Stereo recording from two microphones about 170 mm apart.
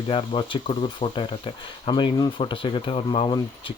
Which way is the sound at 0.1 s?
30° left (ahead or behind).